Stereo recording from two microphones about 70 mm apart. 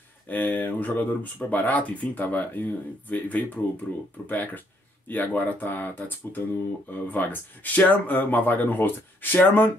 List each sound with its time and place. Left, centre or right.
0.3 s speech: left